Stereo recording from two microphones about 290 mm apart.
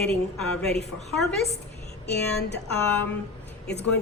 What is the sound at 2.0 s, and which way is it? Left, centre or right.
Speech, left.